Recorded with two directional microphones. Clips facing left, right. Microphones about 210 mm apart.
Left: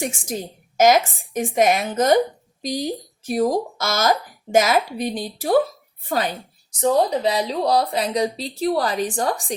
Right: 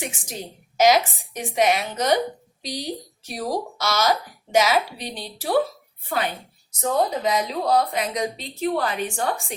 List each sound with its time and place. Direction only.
0.0 s a woman's voice: 45° left (ahead or behind)
6.7 s speech: 35° left (ahead or behind)